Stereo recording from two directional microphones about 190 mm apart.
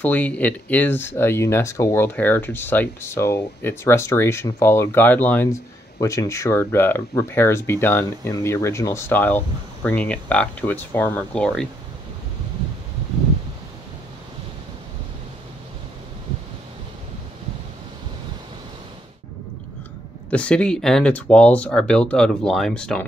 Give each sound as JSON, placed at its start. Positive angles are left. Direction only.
{"t": 0.0, "sound": "speech", "side_deg": 10}
{"t": 20.2, "sound": "speech", "side_deg": 5}